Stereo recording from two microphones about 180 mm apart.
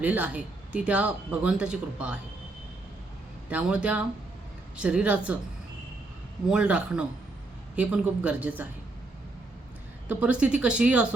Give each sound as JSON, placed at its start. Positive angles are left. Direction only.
{"t": 0.0, "sound": "speech", "side_deg": -10}
{"t": 3.5, "sound": "speech", "side_deg": -5}
{"t": 6.5, "sound": "a man's voice", "side_deg": -5}
{"t": 10.1, "sound": "speech", "side_deg": -5}